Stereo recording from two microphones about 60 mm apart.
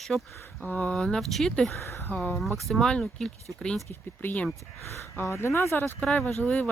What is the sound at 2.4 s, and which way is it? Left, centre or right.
Speech, centre.